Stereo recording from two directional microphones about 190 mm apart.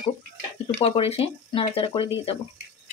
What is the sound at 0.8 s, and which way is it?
Speech, 30° left (ahead or behind).